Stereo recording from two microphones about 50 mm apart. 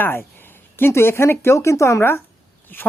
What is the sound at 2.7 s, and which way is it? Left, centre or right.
Speech, left.